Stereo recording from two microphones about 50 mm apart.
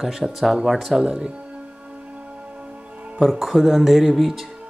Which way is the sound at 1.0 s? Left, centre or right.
Centre.